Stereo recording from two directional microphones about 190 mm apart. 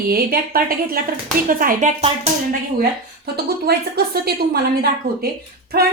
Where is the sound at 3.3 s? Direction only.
55° right (ahead or behind).